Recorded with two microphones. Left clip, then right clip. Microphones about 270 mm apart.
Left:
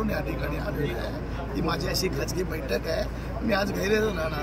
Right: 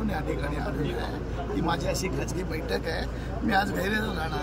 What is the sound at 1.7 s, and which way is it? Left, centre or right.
Speech, centre.